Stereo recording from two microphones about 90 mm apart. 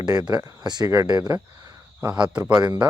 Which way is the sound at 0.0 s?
45° right (ahead or behind).